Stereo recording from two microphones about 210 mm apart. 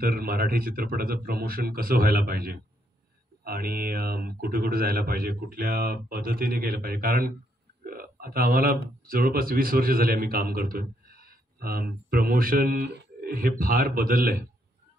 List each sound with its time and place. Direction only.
0.0 s a man's voice: 45° right (ahead or behind)